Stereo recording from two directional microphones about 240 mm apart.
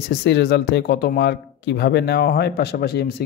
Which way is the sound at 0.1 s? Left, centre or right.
Left.